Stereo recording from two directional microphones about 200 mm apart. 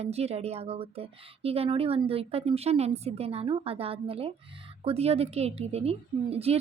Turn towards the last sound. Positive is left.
turn(degrees=-30)  # may be behind; listen again after turning